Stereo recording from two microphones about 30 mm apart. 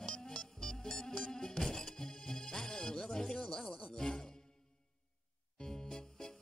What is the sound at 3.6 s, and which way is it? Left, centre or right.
Music, left.